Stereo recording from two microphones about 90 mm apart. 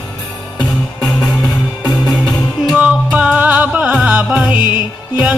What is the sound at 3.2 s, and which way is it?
Music, 15° right (ahead or behind).